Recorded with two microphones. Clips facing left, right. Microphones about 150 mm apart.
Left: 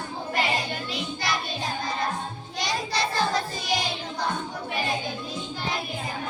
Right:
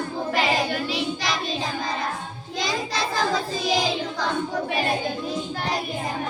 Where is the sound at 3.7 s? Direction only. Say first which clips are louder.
Right 3 dB; 90° right.